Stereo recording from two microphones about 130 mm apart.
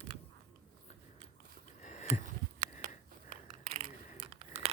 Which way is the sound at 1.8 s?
65° left (ahead or behind).